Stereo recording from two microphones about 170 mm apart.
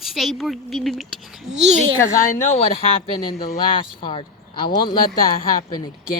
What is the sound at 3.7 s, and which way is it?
Speech, 30° left (ahead or behind).